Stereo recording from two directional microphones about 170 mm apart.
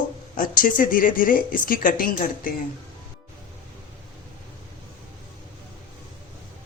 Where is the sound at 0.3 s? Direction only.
55° left (ahead or behind).